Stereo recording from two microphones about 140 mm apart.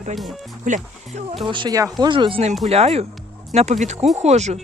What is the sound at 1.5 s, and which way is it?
Speech, 35° right (ahead or behind).